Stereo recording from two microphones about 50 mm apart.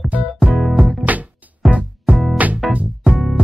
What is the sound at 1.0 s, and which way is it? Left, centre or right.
Music, right.